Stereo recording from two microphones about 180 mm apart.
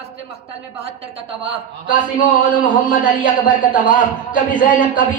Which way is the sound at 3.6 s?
45° left (ahead or behind).